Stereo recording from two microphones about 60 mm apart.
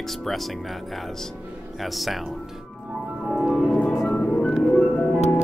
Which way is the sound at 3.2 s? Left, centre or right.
Centre.